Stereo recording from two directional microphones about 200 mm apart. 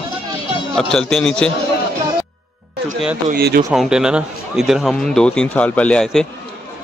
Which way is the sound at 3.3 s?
50° right (ahead or behind).